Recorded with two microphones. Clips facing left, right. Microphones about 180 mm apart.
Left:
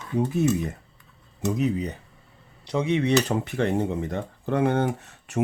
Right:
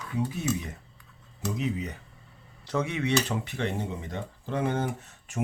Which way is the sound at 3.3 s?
50° left (ahead or behind).